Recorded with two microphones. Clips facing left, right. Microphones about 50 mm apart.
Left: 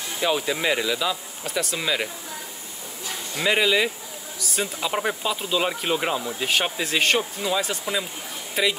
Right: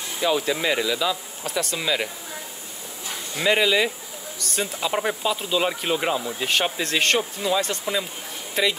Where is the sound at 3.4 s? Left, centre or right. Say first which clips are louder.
Right 1 dB; centre.